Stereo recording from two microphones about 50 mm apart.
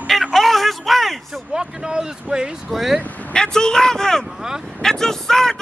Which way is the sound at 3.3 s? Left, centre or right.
Centre.